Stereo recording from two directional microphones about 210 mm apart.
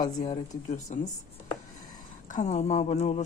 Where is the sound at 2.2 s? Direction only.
35° left (ahead or behind).